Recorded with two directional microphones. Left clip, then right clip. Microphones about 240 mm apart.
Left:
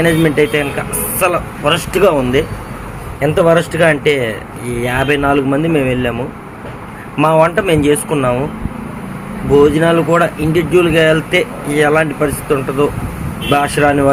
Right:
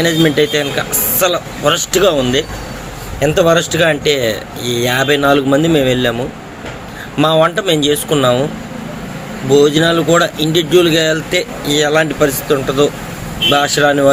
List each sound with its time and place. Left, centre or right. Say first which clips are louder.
0.0 s speech: even; centre
7.2 s speech: left 1 dB; centre
9.5 s speech: even; centre